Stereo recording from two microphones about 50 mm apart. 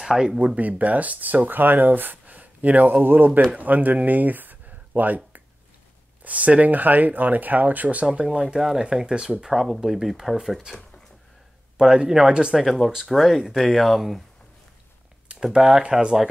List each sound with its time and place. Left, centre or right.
0.0 s speech: centre
0.6 s speech: right
8.1 s speech: centre
8.5 s speech: centre
8.8 s speech: centre
11.7 s speech: centre
12.5 s speech: centre
15.4 s speech: centre